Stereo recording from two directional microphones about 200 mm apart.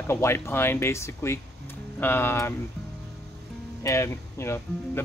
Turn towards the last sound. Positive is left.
turn(degrees=15)  # may be behind; listen again after turning